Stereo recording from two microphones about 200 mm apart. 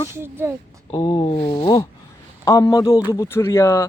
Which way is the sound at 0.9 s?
25° left (ahead or behind).